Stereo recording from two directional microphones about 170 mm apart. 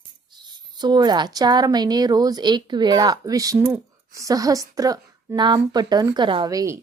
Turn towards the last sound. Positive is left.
turn(degrees=-20)  # may be behind; listen again after turning